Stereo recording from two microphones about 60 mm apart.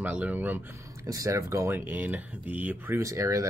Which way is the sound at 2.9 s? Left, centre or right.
Right.